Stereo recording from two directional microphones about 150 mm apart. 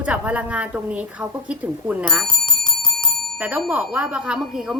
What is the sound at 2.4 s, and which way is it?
Bicycle bell, 30° left (ahead or behind).